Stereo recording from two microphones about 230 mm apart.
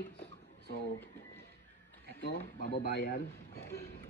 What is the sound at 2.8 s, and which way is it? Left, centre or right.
Speech, left.